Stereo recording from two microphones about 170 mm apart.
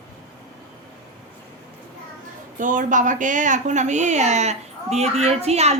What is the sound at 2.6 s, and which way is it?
A woman's voice, 50° right (ahead or behind).